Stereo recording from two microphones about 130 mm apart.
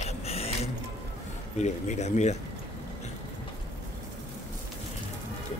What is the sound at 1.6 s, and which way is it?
Speech, 60° left (ahead or behind).